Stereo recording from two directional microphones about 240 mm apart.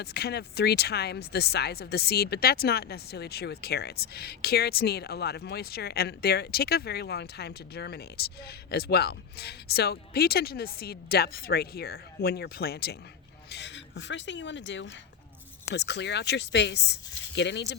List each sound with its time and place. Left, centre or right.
0.0 s speech: left